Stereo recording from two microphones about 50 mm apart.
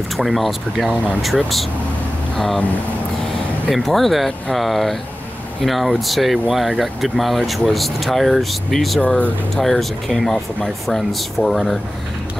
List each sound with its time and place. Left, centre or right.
0.2 s speech: centre
3.7 s speech: centre